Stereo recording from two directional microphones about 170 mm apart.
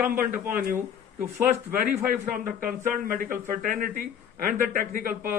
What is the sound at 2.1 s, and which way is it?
A man's voice, 55° right (ahead or behind).